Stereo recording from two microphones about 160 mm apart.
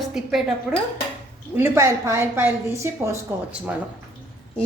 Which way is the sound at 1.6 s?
15° right (ahead or behind).